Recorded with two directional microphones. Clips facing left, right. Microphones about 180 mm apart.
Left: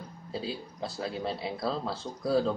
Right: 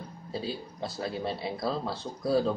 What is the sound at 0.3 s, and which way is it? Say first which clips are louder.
Speech: right 1 dB; centre (ahead or behind).